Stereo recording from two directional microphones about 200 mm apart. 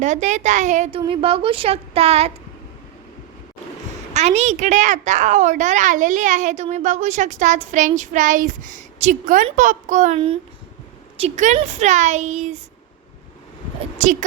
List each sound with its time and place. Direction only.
0.0 s a woman's voice: 35° right (ahead or behind)
4.1 s a woman's voice: 35° right (ahead or behind)
14.0 s a woman's voice: 40° right (ahead or behind)